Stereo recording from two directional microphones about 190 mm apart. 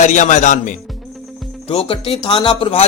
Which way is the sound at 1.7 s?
30° left (ahead or behind).